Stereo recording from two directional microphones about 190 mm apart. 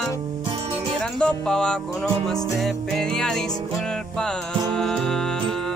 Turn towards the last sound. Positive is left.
turn(degrees=0)  # may be behind; listen again after turning